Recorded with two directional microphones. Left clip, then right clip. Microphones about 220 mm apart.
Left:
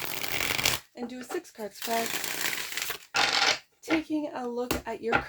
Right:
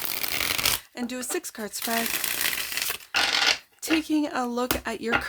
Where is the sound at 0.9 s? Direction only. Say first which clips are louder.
Right 5 dB; 40° right (ahead or behind).